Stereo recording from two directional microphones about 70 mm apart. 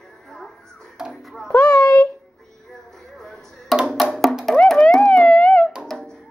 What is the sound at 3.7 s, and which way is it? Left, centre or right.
Music, centre.